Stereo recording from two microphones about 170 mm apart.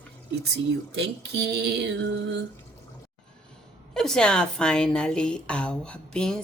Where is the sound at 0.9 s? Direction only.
90° right.